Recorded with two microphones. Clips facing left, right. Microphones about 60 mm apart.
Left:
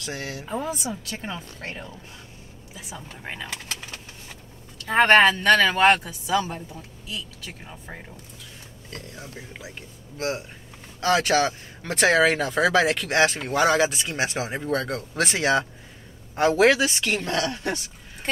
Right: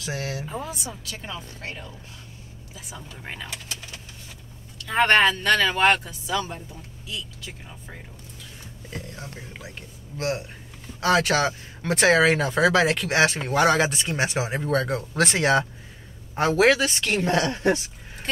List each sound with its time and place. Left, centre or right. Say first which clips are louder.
0.0 s speech: right 2 dB; centre
1.2 s speech: left 1 dB; left
3.2 s speech: left 1 dB; centre
5.0 s speech: left 3 dB; centre
9.1 s speech: even; centre
17.2 s speech: right 4 dB; right